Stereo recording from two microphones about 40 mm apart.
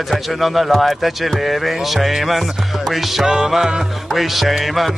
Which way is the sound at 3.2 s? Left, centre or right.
Centre.